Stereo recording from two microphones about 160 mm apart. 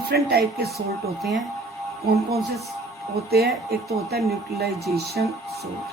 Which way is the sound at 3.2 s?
80° right.